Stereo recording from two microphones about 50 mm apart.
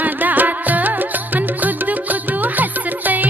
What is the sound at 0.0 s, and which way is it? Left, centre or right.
Music, right.